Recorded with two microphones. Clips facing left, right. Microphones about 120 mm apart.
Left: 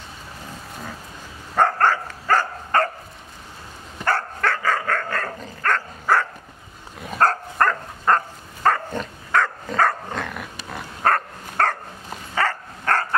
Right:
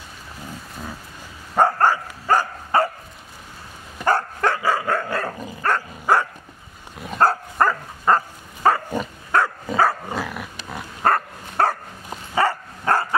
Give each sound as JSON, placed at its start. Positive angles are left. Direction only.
{"t": 1.5, "sound": "dog", "side_deg": -10}
{"t": 4.0, "sound": "dog", "side_deg": -15}